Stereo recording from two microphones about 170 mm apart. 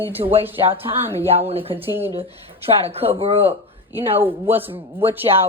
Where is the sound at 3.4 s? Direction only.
10° right (ahead or behind).